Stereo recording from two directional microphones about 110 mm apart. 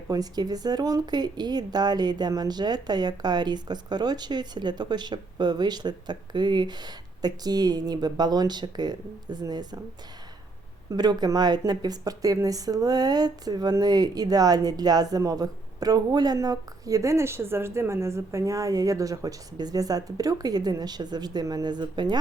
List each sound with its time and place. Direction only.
0.1 s speech: 35° right (ahead or behind)
10.9 s speech: 40° right (ahead or behind)